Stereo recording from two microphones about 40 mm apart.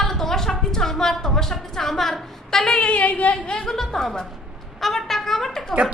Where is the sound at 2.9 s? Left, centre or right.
Left.